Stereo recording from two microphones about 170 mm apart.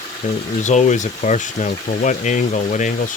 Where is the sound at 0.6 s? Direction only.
45° left (ahead or behind).